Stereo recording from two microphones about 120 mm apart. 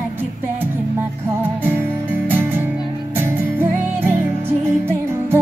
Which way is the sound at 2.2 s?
15° right (ahead or behind).